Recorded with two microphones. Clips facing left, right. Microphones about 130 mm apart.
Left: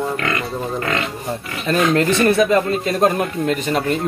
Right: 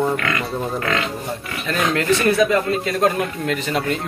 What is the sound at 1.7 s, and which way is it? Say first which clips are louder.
Speech: left 3 dB; 30° left (ahead or behind).